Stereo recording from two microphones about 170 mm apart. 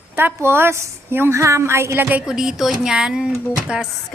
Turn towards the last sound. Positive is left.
turn(degrees=-5)  # may be behind; listen again after turning